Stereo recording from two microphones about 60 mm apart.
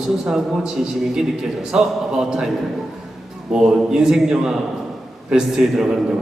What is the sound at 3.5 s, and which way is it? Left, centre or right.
A man's voice, centre.